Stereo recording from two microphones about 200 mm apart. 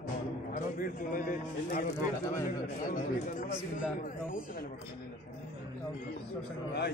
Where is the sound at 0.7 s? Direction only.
45° left (ahead or behind).